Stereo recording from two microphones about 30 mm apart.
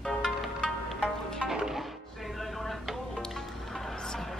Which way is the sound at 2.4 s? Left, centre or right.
Centre.